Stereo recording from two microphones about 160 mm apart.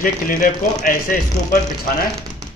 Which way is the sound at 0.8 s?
60° left (ahead or behind).